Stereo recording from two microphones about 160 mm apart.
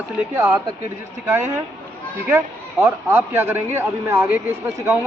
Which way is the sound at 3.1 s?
15° right (ahead or behind).